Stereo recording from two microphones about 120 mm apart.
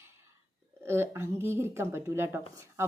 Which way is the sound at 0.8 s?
20° right (ahead or behind).